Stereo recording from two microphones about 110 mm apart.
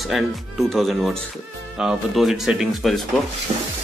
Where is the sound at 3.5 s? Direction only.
75° right (ahead or behind).